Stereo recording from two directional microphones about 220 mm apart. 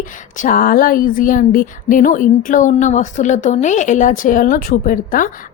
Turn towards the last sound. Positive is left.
turn(degrees=40)  # may be behind; listen again after turning